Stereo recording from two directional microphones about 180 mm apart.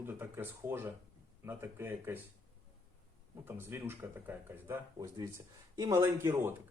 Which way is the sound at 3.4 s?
15° right (ahead or behind).